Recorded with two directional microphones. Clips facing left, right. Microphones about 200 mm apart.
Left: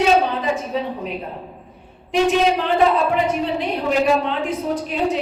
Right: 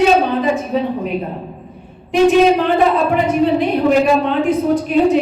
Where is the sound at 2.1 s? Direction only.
55° right (ahead or behind).